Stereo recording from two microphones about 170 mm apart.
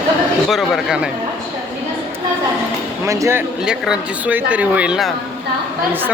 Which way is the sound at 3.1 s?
15° right (ahead or behind).